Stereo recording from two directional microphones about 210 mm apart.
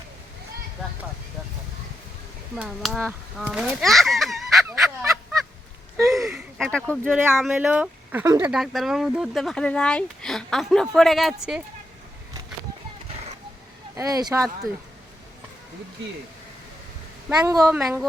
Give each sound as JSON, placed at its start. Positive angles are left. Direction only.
{"t": 2.6, "sound": "speech", "side_deg": 0}
{"t": 6.2, "sound": "a sound", "side_deg": 0}
{"t": 7.0, "sound": "speech", "side_deg": -10}
{"t": 13.9, "sound": "speech", "side_deg": -15}
{"t": 17.2, "sound": "speech", "side_deg": -10}